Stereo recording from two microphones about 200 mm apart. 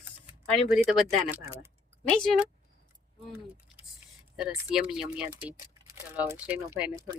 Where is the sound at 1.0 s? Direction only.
15° right (ahead or behind).